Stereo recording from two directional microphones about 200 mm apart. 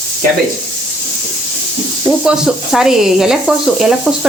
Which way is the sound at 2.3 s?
5° right (ahead or behind).